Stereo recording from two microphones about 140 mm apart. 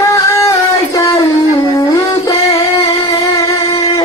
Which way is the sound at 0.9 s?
25° left (ahead or behind).